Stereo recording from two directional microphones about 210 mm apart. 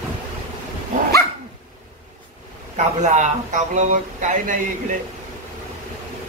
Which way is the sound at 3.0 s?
35° right (ahead or behind).